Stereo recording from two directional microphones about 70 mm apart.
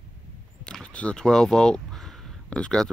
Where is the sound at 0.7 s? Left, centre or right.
Centre.